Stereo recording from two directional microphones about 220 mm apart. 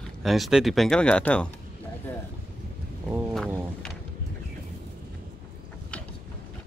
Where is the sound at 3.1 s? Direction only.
Centre (ahead or behind).